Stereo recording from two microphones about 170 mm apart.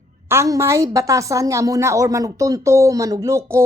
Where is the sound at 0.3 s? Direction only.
15° right (ahead or behind).